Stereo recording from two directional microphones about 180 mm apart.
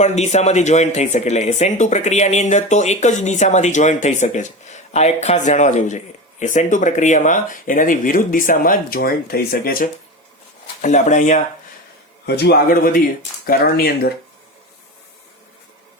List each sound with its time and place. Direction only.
0.0 s speech: 40° left (ahead or behind)
10.8 s speech: 40° left (ahead or behind)
12.2 s a man's voice: 65° left (ahead or behind)